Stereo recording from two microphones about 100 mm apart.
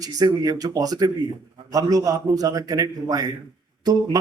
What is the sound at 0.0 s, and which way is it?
Speech, 40° right (ahead or behind).